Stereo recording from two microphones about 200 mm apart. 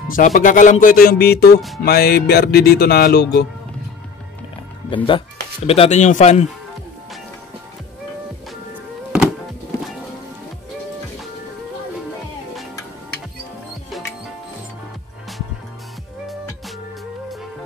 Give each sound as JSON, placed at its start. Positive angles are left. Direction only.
{"t": 0.1, "sound": "speech", "side_deg": 40}
{"t": 4.8, "sound": "speech", "side_deg": 25}